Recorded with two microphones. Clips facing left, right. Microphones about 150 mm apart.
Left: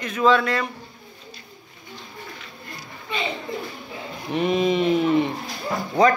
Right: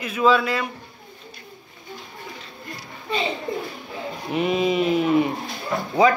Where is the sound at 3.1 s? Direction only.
35° right (ahead or behind).